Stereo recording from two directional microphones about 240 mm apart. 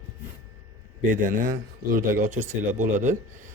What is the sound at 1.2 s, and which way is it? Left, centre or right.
Speech, right.